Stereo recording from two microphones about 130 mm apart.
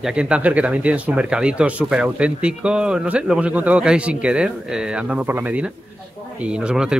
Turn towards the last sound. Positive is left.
turn(degrees=-5)  # may be behind; listen again after turning